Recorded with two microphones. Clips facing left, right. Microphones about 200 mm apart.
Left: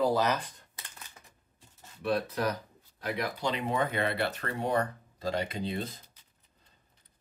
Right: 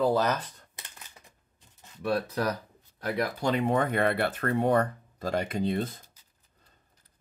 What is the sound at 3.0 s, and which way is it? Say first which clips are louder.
Speech: right 4 dB; 45° right (ahead or behind).